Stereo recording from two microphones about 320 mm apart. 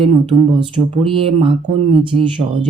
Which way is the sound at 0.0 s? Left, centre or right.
Centre.